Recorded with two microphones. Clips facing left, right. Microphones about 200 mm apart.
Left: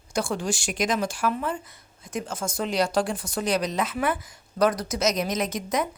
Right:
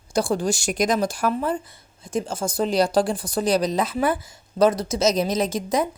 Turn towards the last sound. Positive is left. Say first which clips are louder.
# right 4 dB
turn(degrees=-30)  # may be behind; listen again after turning